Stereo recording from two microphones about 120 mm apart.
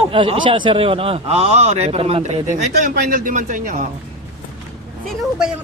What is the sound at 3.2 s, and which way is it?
Speech, 90° right.